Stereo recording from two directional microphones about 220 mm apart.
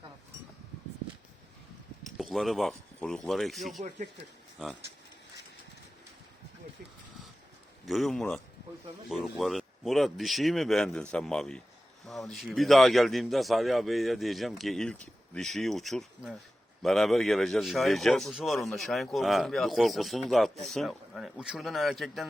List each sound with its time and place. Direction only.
2.0 s speech: centre (ahead or behind)
3.8 s speech: 35° right (ahead or behind)
4.6 s a man's voice: centre (ahead or behind)
7.9 s a man's voice: centre (ahead or behind)